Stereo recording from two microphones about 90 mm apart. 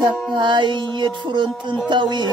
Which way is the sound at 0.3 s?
60° right (ahead or behind).